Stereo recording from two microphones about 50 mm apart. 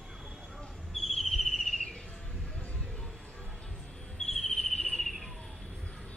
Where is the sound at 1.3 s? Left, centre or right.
Centre.